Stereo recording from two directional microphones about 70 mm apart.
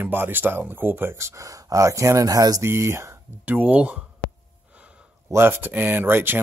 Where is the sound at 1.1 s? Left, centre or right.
Right.